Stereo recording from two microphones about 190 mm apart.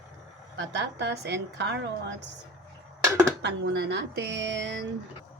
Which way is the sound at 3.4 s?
65° right (ahead or behind).